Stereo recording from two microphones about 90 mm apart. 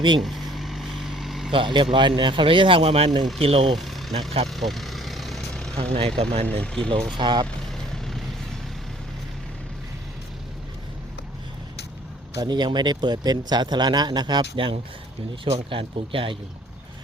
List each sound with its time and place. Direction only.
0.2 s vehicle: centre (ahead or behind)
1.5 s speech: 70° right (ahead or behind)
3.4 s speech: 90° right
3.8 s speech: centre (ahead or behind)
4.4 s vehicle: centre (ahead or behind)
5.9 s speech: 90° right
6.4 s speech: 10° left (ahead or behind)
6.9 s speech: 60° right (ahead or behind)
7.9 s vehicle: 5° left (ahead or behind)
12.4 s speech: 55° right (ahead or behind)
14.5 s speech: 75° right (ahead or behind)
15.4 s speech: 85° right